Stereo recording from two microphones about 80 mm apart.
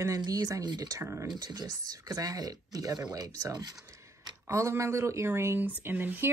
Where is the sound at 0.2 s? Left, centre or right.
Right.